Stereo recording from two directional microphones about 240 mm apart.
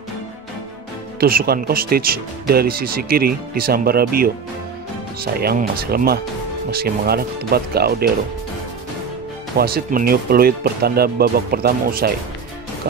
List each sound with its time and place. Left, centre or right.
1.2 s speech: right
9.6 s speech: right